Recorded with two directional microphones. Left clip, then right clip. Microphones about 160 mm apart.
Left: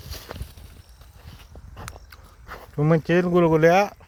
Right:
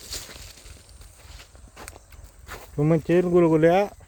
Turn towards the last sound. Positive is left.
turn(degrees=-20)  # may be behind; listen again after turning